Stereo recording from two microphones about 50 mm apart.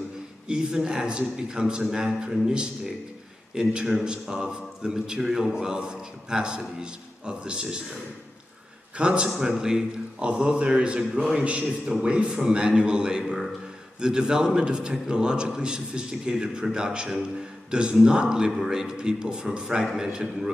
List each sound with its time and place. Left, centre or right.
0.5 s a man's voice: centre
8.9 s a man's voice: centre
9.4 s a man's voice: centre